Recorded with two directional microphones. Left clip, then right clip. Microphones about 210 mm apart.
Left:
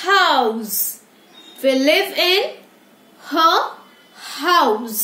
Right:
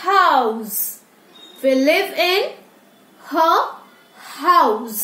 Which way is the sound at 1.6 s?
20° left (ahead or behind).